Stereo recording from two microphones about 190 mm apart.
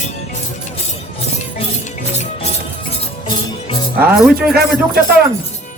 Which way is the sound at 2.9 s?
25° left (ahead or behind).